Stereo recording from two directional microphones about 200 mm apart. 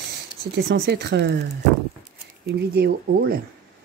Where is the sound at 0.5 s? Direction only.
55° right (ahead or behind).